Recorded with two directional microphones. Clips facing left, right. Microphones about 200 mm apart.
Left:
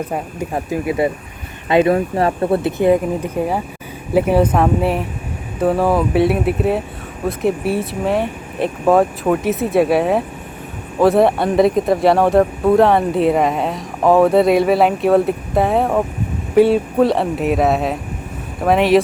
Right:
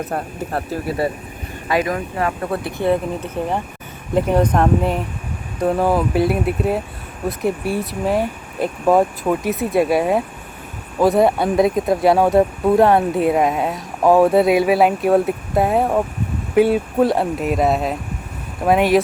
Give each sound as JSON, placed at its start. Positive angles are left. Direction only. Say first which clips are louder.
{"t": 0.0, "sound": "speech", "louder": "left 2 dB", "side_deg": 10}